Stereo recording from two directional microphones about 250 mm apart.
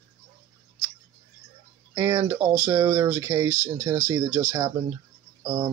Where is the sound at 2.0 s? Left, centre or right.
Centre.